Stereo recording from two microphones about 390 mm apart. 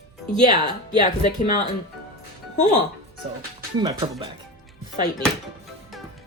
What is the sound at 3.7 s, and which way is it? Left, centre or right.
Speech, centre.